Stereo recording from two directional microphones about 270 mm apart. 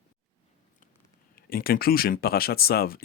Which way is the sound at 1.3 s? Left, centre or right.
Left.